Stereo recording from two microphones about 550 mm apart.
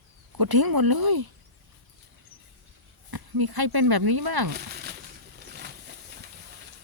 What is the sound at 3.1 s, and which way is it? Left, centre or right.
Speech, right.